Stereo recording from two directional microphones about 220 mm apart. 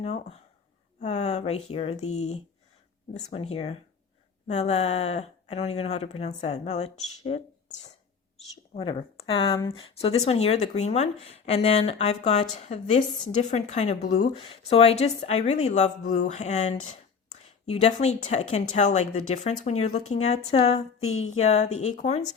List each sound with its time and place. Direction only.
0.0 s a woman's voice: 30° left (ahead or behind)